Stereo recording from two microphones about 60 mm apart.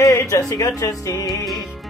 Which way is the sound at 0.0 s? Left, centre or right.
Left.